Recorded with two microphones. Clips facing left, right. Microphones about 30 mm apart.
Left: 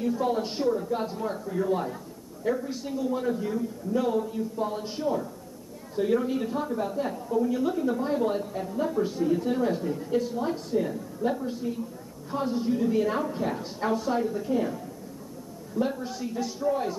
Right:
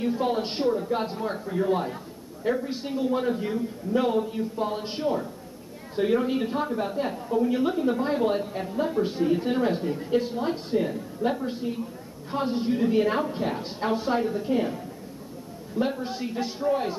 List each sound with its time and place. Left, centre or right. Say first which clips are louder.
0.0 s a man's voice: right 1 dB; right